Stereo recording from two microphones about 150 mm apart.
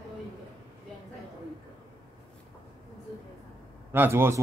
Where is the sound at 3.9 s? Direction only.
15° right (ahead or behind).